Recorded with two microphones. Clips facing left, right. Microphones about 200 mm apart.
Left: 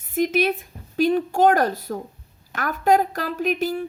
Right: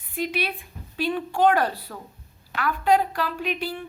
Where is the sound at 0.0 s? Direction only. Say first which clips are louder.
Left 7 dB; 45° left (ahead or behind).